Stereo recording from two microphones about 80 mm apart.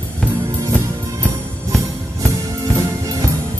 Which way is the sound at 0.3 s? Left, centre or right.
Right.